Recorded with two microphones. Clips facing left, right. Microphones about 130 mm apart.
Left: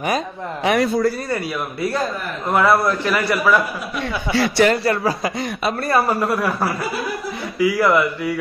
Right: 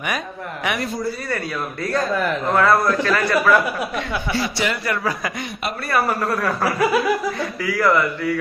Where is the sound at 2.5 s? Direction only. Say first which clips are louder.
Left 2 dB; 15° left (ahead or behind).